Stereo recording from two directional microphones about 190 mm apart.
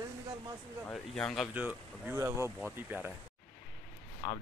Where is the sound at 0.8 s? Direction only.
5° left (ahead or behind); by 3.1 s 10° right (ahead or behind).